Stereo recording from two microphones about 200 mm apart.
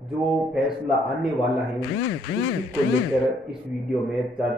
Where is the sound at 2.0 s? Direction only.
65° left (ahead or behind).